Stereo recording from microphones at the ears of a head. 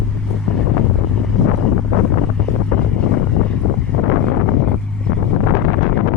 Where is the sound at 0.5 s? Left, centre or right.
Left.